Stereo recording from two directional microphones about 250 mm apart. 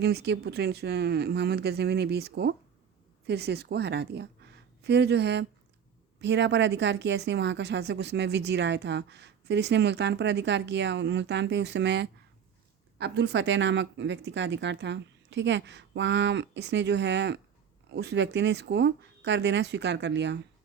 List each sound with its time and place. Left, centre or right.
0.0 s speech: right